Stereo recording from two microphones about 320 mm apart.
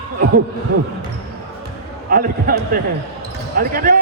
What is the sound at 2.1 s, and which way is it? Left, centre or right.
A man's voice, right.